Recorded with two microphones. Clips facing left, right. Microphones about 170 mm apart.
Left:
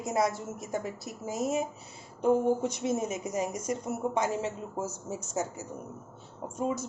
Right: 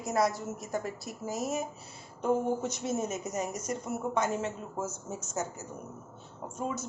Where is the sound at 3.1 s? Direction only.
10° left (ahead or behind).